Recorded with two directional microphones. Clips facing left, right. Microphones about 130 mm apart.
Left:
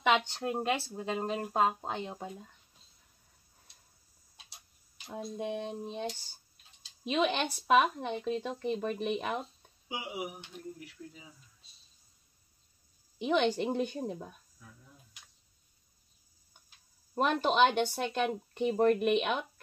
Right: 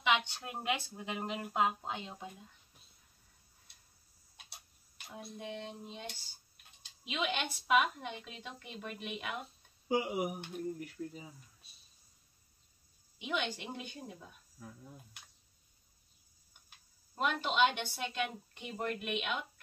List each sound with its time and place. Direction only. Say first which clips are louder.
0.4 s speech: left 6 dB; 30° left (ahead or behind)
5.1 s speech: left 8 dB; 50° left (ahead or behind)
9.8 s speech: right 6 dB; 45° right (ahead or behind)
13.2 s speech: left 10 dB; 45° left (ahead or behind)
17.1 s speech: left 6 dB; 45° left (ahead or behind)